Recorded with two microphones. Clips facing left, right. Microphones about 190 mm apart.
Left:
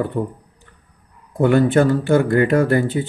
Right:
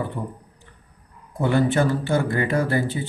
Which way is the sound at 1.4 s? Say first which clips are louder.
Left 6 dB; 55° left (ahead or behind).